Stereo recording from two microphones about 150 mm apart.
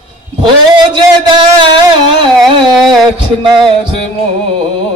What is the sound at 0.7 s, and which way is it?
A man's voice, 30° right (ahead or behind).